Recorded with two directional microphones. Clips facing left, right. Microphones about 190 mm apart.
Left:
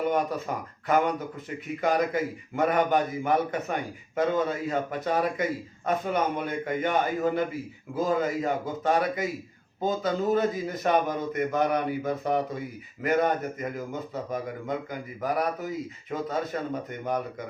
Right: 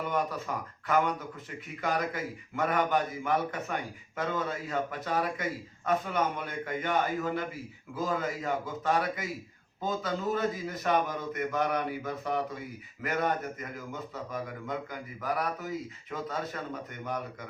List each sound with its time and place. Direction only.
0.1 s a man's voice: 20° left (ahead or behind)
12.0 s speech: 45° left (ahead or behind)
13.0 s a man's voice: 20° left (ahead or behind)
15.2 s a man's voice: 15° left (ahead or behind)